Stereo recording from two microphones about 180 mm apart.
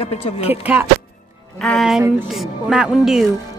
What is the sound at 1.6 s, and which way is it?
Speech, centre (ahead or behind).